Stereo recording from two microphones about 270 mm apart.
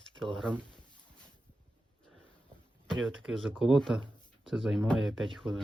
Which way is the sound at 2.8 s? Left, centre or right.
Centre.